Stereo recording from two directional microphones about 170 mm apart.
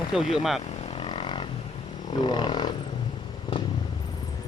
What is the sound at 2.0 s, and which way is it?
Wild animals, 25° left (ahead or behind).